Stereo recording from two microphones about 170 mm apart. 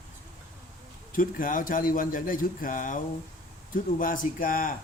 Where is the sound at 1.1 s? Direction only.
55° left (ahead or behind).